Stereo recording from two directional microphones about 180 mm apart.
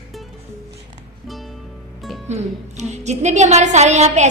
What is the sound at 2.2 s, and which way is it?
Music, 40° right (ahead or behind).